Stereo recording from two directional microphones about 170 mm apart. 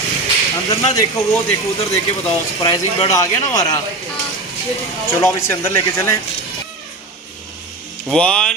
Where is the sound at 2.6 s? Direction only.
30° left (ahead or behind).